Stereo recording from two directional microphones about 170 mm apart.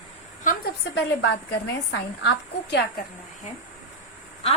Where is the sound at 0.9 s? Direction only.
90° left.